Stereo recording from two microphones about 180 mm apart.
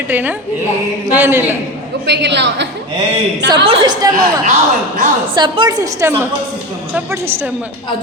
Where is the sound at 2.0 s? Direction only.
75° right (ahead or behind).